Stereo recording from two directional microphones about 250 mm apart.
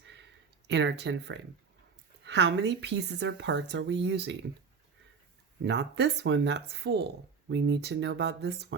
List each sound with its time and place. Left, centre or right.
0.1 s a sound: right
2.2 s speech: right
5.6 s speech: right